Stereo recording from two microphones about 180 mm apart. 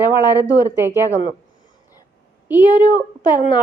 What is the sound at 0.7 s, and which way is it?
Speech, 15° right (ahead or behind).